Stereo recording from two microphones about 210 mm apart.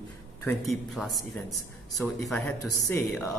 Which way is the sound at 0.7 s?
Centre (ahead or behind).